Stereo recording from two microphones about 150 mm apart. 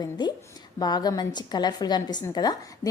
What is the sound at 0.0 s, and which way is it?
A woman's voice, 30° left (ahead or behind).